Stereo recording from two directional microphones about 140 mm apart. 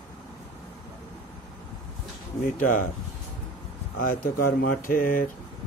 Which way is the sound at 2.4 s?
70° left (ahead or behind).